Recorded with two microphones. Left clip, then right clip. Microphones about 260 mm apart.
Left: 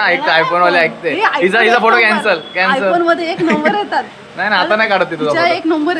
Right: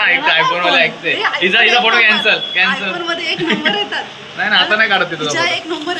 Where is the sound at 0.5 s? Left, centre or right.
Centre.